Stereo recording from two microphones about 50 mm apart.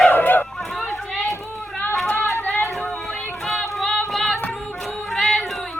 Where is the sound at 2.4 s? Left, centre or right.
Left.